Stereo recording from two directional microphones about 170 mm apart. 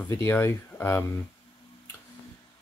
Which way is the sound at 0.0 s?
15° left (ahead or behind).